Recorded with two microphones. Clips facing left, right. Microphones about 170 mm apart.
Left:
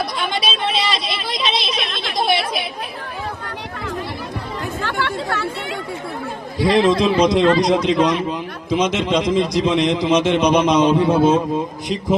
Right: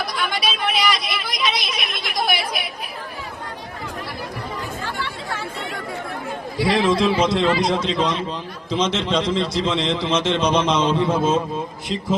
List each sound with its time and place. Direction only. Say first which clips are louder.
0.0 s a sound: left 2 dB; 25° left (ahead or behind)
4.8 s chatter: left 6 dB; 75° left (ahead or behind)
6.6 s a man's voice: left 3 dB; 20° left (ahead or behind)